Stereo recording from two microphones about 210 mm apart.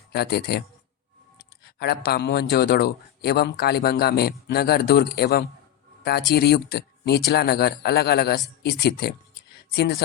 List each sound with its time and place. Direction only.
0.1 s a man's voice: 50° left (ahead or behind)
1.8 s a man's voice: 50° left (ahead or behind)